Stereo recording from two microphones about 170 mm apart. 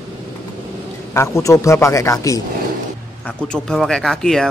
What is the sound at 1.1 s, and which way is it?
A man's voice, 15° left (ahead or behind).